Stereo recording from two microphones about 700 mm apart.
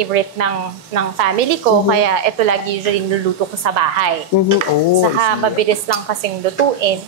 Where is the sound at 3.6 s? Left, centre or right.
Right.